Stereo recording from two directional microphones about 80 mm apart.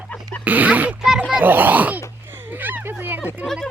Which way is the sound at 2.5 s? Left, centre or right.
Right.